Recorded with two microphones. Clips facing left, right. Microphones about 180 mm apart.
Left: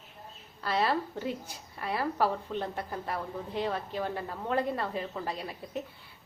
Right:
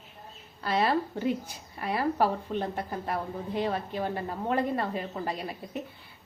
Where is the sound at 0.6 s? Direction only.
15° right (ahead or behind).